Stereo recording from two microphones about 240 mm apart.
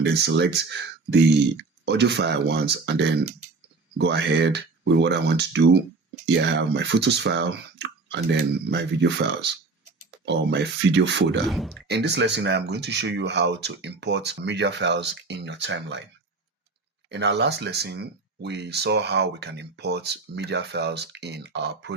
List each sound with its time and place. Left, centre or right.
0.0 s speech: right
1.8 s speech: right
11.4 s speech: centre
11.9 s speech: right
17.1 s speech: right